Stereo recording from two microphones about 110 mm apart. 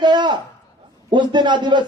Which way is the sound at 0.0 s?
40° right (ahead or behind).